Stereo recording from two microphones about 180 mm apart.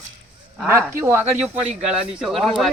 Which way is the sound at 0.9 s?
15° right (ahead or behind).